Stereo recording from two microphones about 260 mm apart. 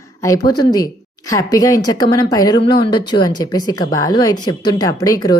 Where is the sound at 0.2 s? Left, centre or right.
Centre.